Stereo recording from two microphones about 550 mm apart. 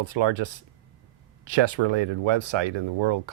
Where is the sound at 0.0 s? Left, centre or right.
Right.